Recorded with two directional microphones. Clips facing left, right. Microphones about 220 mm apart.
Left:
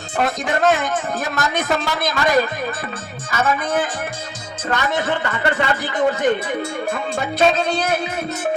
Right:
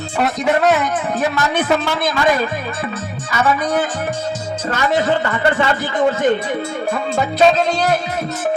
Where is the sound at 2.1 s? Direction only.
45° left (ahead or behind).